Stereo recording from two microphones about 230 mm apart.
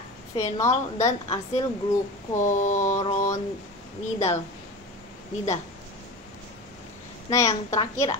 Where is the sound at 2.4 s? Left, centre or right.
Left.